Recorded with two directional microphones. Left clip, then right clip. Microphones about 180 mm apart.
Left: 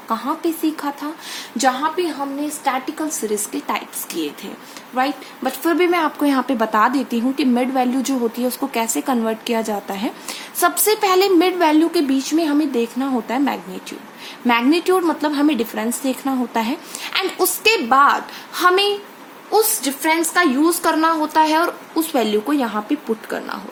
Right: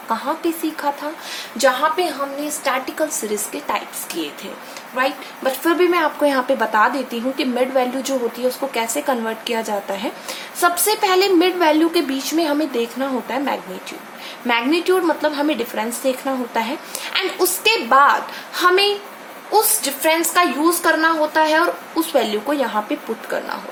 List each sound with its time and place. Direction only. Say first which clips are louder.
0.1 s speech: even; 30° left (ahead or behind)
2.6 s a woman's voice: right 1 dB; 20° left (ahead or behind)
3.5 s a woman's voice: right 1 dB; 30° left (ahead or behind)
20.8 s speech: right 1 dB; 40° left (ahead or behind)